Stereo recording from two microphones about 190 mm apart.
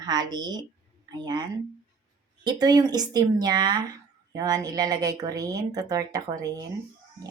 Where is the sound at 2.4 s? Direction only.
20° right (ahead or behind).